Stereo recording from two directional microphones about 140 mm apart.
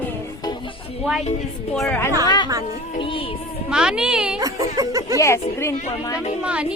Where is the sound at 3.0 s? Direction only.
40° left (ahead or behind).